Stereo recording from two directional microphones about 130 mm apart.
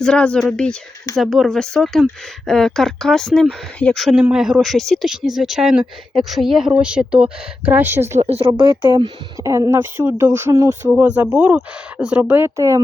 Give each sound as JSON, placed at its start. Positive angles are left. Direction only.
{"t": 0.0, "sound": "speech", "side_deg": 5}
{"t": 8.2, "sound": "speech", "side_deg": -50}
{"t": 9.4, "sound": "speech", "side_deg": -25}
{"t": 12.5, "sound": "speech", "side_deg": -25}